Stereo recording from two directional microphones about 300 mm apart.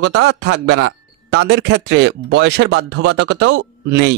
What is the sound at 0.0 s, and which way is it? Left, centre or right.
A man's voice, right.